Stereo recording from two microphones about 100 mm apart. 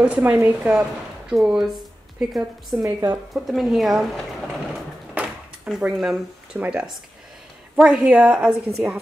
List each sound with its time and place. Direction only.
0.0 s a woman's voice: 15° right (ahead or behind)
2.8 s a woman's voice: 25° right (ahead or behind)
3.3 s speech: centre (ahead or behind)